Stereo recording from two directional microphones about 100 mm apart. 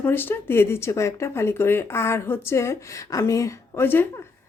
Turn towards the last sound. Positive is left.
turn(degrees=30)  # may be behind; listen again after turning